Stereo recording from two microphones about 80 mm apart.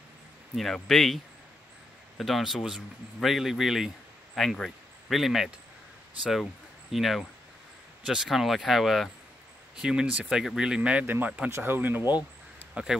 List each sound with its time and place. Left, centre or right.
0.6 s a man's voice: centre
6.9 s a man's voice: centre